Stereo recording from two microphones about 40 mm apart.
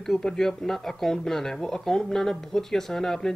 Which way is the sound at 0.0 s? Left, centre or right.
Centre.